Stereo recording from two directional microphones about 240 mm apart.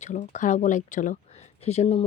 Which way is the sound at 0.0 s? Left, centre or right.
Left.